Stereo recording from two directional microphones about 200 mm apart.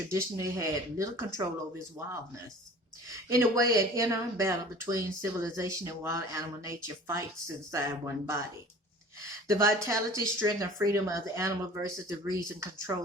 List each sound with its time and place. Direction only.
0.1 s speech: 15° right (ahead or behind)
3.2 s speech: 15° right (ahead or behind)
9.5 s speech: 15° right (ahead or behind)